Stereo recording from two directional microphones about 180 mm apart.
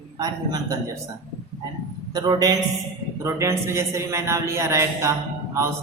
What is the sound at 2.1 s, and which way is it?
A man's voice, 20° right (ahead or behind).